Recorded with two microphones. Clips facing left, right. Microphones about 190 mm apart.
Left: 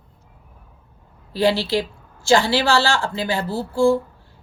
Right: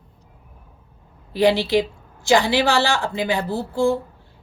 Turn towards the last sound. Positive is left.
turn(degrees=-20)  # may be behind; listen again after turning